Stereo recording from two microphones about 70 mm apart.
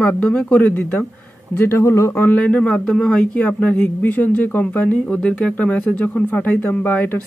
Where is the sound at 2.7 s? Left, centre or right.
Centre.